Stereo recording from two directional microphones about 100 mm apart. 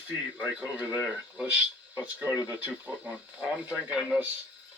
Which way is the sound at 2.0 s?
15° right (ahead or behind).